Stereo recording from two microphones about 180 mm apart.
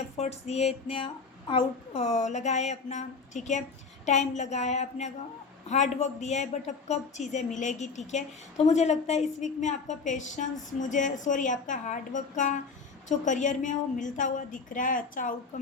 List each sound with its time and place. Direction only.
0.2 s a woman's voice: 35° left (ahead or behind)